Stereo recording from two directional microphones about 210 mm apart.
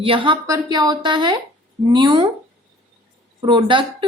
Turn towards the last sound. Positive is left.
turn(degrees=-25)  # may be behind; listen again after turning